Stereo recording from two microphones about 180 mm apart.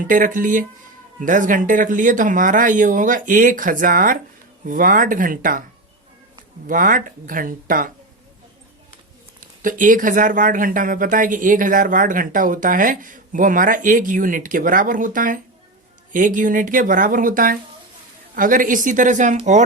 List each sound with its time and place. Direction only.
0.0 s speech: 50° right (ahead or behind)
6.7 s speech: 50° right (ahead or behind)
9.4 s speech: 45° right (ahead or behind)